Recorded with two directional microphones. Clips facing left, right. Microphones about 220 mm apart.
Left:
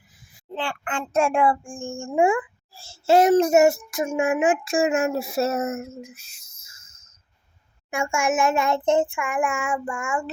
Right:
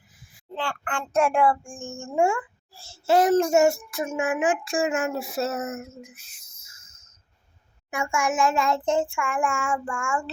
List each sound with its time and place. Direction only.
0.5 s a child's voice: 20° left (ahead or behind)
7.9 s a child's voice: 25° left (ahead or behind)